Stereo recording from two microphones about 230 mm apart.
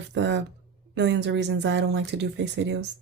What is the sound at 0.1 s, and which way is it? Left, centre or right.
Speech, right.